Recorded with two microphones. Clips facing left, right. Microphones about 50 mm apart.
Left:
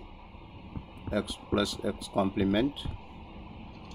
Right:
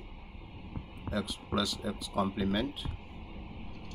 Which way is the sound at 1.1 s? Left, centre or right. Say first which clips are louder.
Left 4 dB; left.